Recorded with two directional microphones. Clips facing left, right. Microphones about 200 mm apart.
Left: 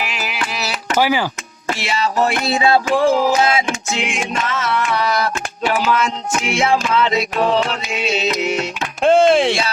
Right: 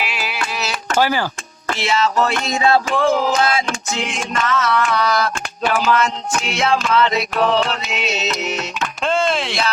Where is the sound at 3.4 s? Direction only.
25° left (ahead or behind).